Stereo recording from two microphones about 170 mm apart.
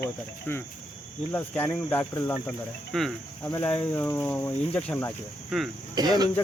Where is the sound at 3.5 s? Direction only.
10° left (ahead or behind).